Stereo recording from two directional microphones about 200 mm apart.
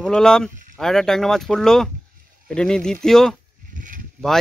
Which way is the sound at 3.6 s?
40° right (ahead or behind).